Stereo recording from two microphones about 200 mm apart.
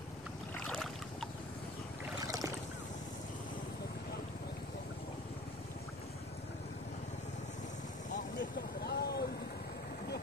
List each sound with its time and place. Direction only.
0.7 s boat: centre (ahead or behind)
2.1 s boat: 20° right (ahead or behind)
8.1 s vehicle: 50° left (ahead or behind)